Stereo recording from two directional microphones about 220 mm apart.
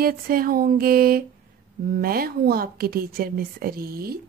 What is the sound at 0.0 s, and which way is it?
A woman's voice, 40° right (ahead or behind).